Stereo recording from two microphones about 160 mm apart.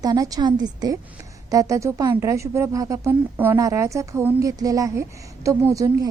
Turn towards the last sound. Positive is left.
turn(degrees=-20)  # may be behind; listen again after turning